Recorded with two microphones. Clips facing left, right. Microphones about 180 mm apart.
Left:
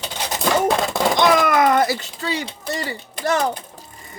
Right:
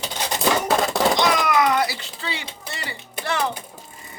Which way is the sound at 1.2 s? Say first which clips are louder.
Left 4 dB; 50° left (ahead or behind).